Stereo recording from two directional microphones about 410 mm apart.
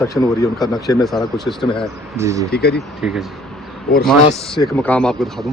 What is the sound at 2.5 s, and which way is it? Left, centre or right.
Speech, left.